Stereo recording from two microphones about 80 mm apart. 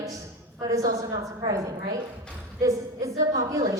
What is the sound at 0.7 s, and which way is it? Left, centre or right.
A woman's voice, right.